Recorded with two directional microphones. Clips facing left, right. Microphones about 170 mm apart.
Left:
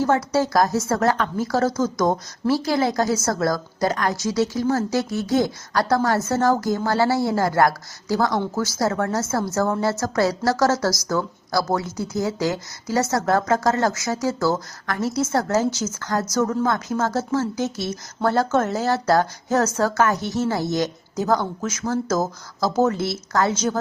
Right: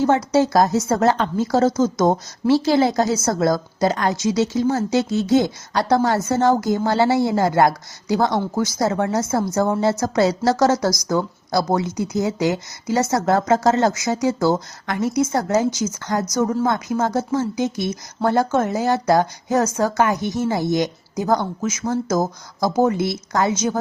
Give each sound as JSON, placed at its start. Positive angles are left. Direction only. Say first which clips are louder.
{"t": 0.0, "sound": "a woman's voice", "louder": "right 3 dB", "side_deg": -20}